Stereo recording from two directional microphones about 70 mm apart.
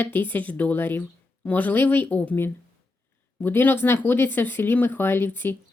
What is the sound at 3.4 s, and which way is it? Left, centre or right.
A woman's voice, left.